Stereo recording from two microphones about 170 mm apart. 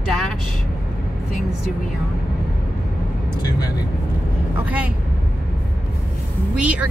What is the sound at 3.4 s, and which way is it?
Speech, 25° left (ahead or behind).